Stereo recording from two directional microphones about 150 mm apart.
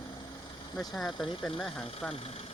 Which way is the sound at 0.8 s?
Centre (ahead or behind).